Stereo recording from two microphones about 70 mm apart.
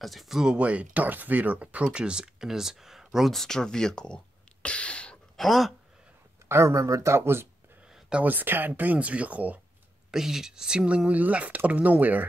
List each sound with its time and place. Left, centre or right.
0.0 s speech: centre
5.4 s speech: centre
6.5 s speech: right
7.9 s a sound: centre
8.3 s speech: right
10.1 s speech: centre
11.1 s speech: right